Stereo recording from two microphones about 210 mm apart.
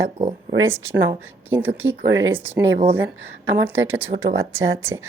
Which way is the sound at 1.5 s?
10° right (ahead or behind).